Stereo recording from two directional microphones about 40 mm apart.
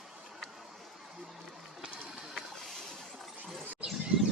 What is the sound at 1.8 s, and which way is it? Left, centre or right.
Run, centre.